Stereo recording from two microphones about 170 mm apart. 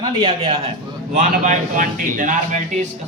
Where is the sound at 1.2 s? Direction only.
50° right (ahead or behind).